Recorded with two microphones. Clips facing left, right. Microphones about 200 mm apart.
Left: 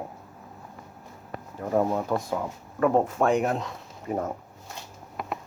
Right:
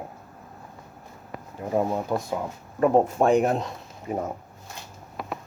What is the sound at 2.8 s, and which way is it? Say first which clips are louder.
Speech: right 2 dB; 25° right (ahead or behind).